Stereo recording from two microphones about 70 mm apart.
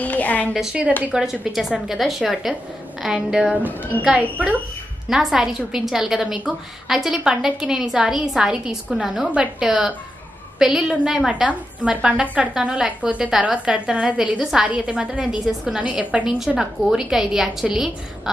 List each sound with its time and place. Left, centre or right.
0.0 s a sound: left
1.1 s a woman's voice: centre
5.1 s a woman's voice: centre